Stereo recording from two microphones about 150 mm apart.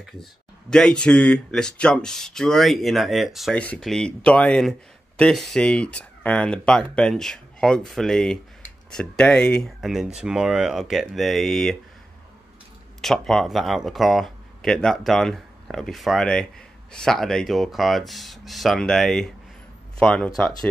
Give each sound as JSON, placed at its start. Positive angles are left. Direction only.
{"t": 0.0, "sound": "speech", "side_deg": 5}
{"t": 13.0, "sound": "speech", "side_deg": 0}